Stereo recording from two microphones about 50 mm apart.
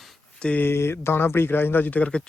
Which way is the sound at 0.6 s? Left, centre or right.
Left.